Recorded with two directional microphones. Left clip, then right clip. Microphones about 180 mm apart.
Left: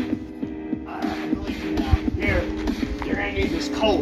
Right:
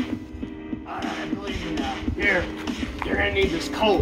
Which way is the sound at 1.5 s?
30° left (ahead or behind).